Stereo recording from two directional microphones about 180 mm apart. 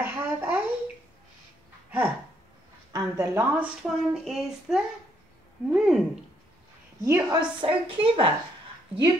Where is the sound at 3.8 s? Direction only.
Centre (ahead or behind).